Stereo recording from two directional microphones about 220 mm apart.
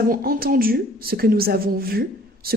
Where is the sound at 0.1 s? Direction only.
40° right (ahead or behind).